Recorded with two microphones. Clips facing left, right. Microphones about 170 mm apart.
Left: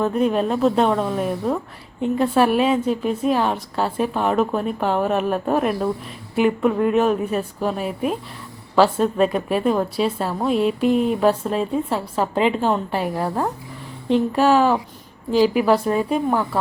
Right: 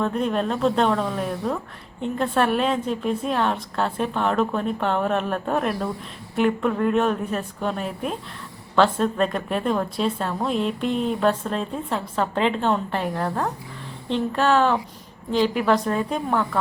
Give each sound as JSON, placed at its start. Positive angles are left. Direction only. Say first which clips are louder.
{"t": 0.0, "sound": "a woman's voice", "louder": "left 4 dB", "side_deg": 5}